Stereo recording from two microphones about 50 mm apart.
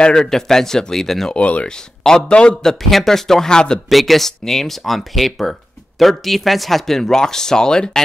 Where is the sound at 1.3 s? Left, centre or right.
Left.